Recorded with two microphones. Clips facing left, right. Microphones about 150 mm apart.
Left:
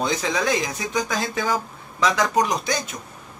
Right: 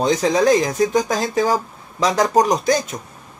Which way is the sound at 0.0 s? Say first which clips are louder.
Right 7 dB; 40° right (ahead or behind).